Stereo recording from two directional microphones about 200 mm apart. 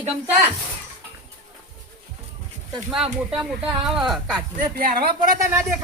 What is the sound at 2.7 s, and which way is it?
Speech, centre (ahead or behind).